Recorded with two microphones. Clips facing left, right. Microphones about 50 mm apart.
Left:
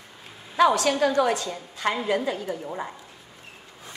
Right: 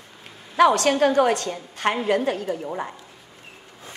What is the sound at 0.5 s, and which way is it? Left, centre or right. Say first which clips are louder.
A woman's voice: right 3 dB; right.